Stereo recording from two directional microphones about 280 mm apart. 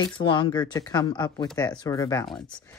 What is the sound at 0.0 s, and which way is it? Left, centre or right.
Speech, centre.